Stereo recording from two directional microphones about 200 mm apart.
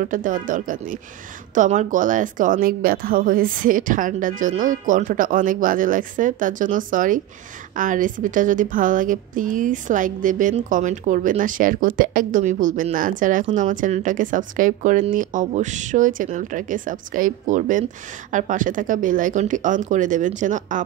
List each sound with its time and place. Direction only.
0.0 s a woman's voice: 40° right (ahead or behind)